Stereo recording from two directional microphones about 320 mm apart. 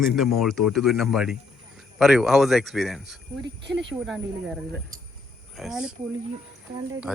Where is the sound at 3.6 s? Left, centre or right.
Right.